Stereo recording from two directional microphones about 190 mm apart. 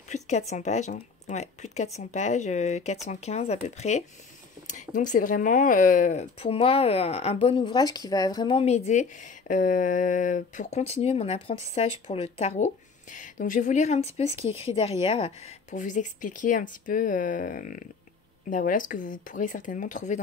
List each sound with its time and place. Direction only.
0.1 s speech: 35° left (ahead or behind)